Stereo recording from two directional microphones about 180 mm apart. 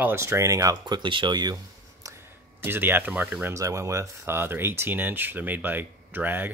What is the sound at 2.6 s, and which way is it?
Speech, 10° right (ahead or behind).